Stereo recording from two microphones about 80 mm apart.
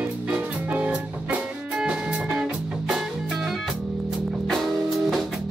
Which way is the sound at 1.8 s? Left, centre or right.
Centre.